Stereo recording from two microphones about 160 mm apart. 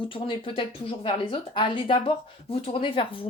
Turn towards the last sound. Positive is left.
turn(degrees=35)  # may be behind; listen again after turning